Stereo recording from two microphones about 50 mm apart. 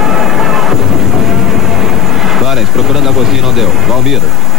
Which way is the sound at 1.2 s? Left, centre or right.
Centre.